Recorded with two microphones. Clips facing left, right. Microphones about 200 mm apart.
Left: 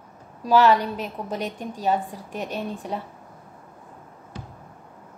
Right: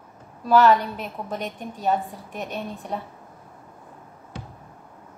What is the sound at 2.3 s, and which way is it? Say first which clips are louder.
Speech: left 2 dB; 35° left (ahead or behind).